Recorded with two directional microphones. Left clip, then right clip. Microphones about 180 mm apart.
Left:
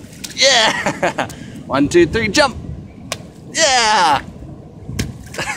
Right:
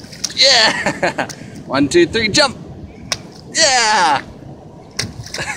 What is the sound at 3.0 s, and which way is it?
Finger snapping, 10° left (ahead or behind).